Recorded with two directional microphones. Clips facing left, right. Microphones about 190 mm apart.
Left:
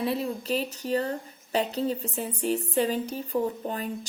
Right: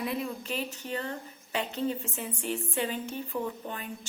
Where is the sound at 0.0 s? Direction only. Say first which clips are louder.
Left 4 dB; 35° left (ahead or behind).